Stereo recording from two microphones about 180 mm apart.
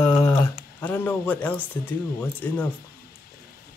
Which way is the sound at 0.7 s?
10° left (ahead or behind).